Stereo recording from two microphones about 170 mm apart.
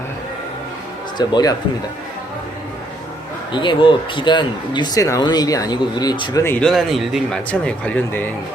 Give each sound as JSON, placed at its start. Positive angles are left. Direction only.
{"t": 1.2, "sound": "speech", "side_deg": 25}
{"t": 3.5, "sound": "speech", "side_deg": 30}
{"t": 6.4, "sound": "speech", "side_deg": 10}